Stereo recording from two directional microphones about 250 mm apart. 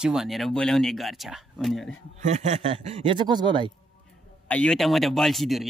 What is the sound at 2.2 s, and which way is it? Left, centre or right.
A man's voice, right.